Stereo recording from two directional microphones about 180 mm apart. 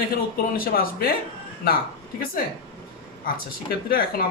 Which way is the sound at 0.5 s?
55° left (ahead or behind).